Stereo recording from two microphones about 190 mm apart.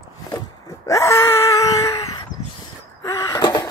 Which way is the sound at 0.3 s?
15° left (ahead or behind).